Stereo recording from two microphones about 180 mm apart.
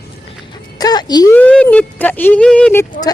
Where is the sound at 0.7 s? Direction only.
20° left (ahead or behind).